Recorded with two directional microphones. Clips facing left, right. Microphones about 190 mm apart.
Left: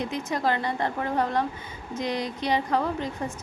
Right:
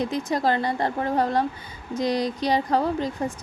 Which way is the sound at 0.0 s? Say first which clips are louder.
Right 3 dB; 35° right (ahead or behind).